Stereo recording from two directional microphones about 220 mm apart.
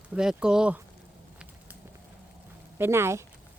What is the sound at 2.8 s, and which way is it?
Speech, 10° right (ahead or behind).